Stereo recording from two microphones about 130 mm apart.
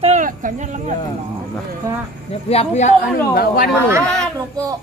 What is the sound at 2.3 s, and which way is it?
Speech, 50° left (ahead or behind).